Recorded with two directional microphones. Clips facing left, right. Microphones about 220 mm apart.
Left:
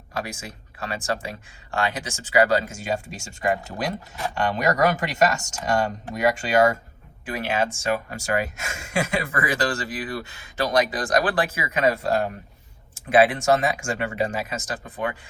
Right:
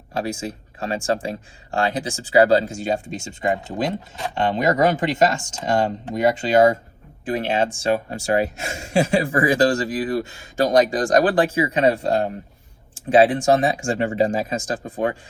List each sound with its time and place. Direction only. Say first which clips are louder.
0.2 s speech: right 6 dB; 35° right (ahead or behind)